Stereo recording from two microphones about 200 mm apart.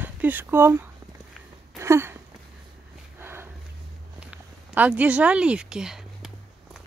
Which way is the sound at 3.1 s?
10° right (ahead or behind).